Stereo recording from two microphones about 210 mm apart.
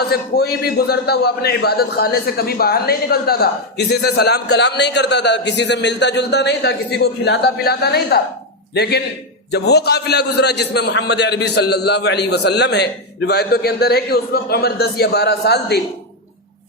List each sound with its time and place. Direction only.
0.1 s a man's voice: 50° left (ahead or behind)